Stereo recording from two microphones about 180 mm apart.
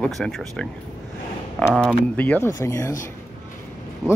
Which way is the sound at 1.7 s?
5° left (ahead or behind).